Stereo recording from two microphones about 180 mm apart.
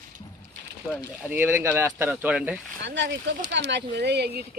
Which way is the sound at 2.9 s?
80° right.